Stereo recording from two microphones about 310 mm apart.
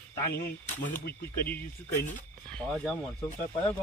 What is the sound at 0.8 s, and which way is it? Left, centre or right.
Speech, left.